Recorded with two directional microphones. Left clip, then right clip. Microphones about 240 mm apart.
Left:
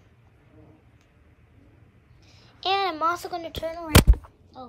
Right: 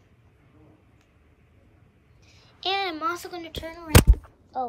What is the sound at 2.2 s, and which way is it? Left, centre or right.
A child's voice, centre.